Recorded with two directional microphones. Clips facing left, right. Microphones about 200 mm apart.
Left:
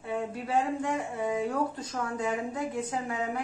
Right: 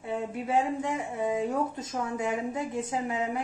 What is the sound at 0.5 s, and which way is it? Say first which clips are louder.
Speech: right 1 dB; 20° right (ahead or behind).